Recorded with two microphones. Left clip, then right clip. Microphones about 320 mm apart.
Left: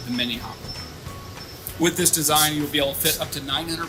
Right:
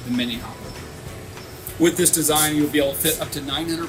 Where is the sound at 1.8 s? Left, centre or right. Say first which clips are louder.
Right 3 dB; centre.